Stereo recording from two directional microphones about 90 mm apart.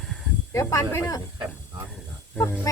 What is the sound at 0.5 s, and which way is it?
Speech, 35° left (ahead or behind).